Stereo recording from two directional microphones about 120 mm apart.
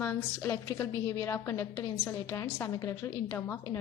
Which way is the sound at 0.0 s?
20° left (ahead or behind).